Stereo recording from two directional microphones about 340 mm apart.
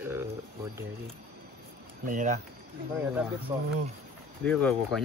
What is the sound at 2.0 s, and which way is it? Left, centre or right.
Speech, right.